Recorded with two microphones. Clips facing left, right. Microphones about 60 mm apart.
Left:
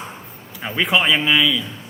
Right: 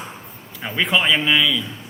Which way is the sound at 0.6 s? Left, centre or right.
Centre.